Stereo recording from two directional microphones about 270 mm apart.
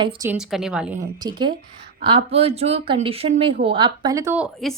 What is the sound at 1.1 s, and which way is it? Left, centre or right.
A woman's voice, centre.